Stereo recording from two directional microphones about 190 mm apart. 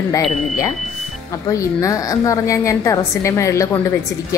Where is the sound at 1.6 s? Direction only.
15° left (ahead or behind).